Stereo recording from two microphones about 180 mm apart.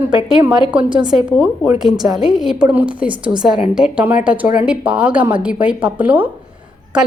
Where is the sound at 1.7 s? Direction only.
25° right (ahead or behind).